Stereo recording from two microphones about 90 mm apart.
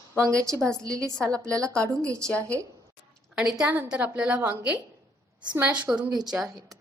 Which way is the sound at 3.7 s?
20° right (ahead or behind).